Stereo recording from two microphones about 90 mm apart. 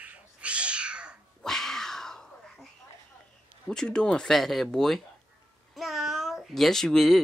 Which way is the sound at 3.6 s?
10° left (ahead or behind).